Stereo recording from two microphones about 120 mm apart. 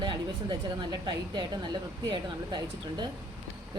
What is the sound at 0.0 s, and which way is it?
A woman's voice, 40° right (ahead or behind).